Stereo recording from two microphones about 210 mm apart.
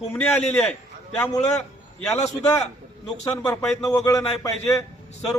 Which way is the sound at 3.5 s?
5° left (ahead or behind).